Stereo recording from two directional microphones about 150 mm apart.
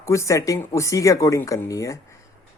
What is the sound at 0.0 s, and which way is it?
Speech, 20° left (ahead or behind).